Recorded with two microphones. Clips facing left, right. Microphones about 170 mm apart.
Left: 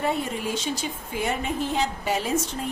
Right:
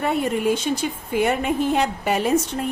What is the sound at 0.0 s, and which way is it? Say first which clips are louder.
A woman's voice: right 6 dB; 60° right (ahead or behind).